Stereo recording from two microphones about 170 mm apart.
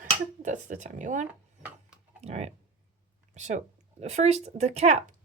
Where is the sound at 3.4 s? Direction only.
45° right (ahead or behind).